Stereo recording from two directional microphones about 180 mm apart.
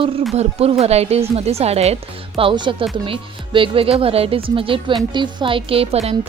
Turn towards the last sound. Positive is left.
turn(degrees=-35)  # may be behind; listen again after turning